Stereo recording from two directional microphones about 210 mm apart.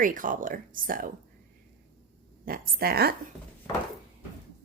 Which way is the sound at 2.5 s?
45° right (ahead or behind).